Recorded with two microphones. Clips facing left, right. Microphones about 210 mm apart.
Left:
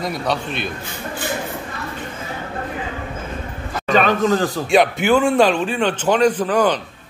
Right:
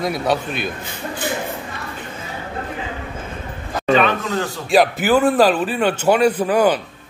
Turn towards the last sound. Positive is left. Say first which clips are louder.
# right 1 dB
turn(degrees=-10)  # may be behind; listen again after turning